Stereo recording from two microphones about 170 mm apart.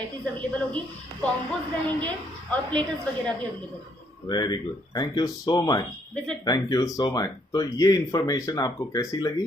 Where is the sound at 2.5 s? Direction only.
5° left (ahead or behind).